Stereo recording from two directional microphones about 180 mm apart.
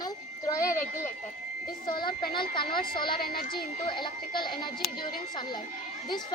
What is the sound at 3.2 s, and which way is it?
Speech, 55° left (ahead or behind).